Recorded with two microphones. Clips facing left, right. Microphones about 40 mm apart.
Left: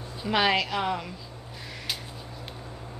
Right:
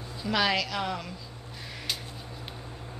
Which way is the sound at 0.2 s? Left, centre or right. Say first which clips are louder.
Left 3 dB; left.